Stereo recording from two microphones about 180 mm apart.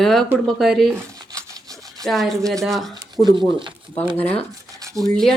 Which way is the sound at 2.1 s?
Centre (ahead or behind).